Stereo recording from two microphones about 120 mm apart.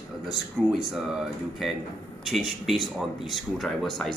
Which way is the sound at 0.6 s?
10° left (ahead or behind).